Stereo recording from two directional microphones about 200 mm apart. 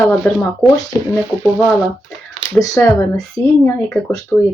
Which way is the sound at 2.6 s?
10° left (ahead or behind).